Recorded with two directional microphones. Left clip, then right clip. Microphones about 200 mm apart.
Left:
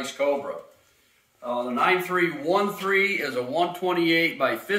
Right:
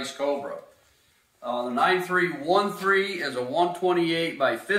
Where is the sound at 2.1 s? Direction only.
40° left (ahead or behind).